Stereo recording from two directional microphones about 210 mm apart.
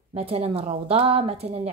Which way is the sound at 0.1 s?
30° right (ahead or behind).